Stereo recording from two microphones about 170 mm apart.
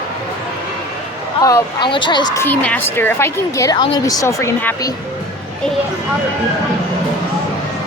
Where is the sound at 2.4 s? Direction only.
10° left (ahead or behind).